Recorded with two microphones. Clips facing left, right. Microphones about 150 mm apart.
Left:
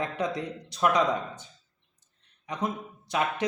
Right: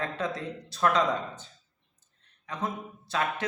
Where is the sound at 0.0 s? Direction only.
15° left (ahead or behind).